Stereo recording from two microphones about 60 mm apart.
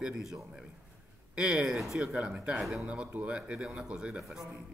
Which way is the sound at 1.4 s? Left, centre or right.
Centre.